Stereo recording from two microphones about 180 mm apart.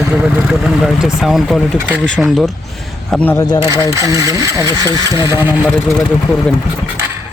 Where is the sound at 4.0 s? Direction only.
20° right (ahead or behind).